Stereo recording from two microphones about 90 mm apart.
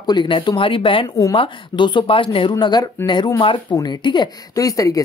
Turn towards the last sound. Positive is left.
turn(degrees=40)  # may be behind; listen again after turning